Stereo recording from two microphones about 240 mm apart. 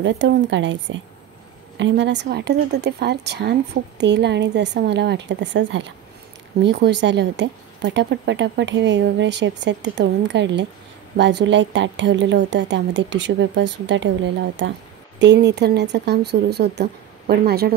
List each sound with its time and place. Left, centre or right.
0.0 s speech: right